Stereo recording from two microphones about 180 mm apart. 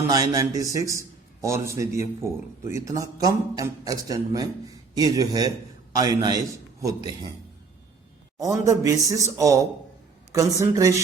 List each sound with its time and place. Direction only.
0.1 s a man's voice: 20° right (ahead or behind)
8.4 s a man's voice: 20° right (ahead or behind)